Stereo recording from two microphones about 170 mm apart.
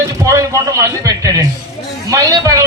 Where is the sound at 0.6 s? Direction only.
20° right (ahead or behind).